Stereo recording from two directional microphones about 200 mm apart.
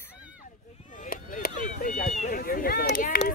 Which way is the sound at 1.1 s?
45° left (ahead or behind).